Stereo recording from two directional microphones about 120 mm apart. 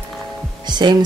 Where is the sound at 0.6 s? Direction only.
35° right (ahead or behind).